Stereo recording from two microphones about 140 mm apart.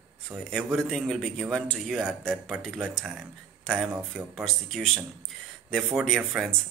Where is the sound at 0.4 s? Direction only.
5° left (ahead or behind).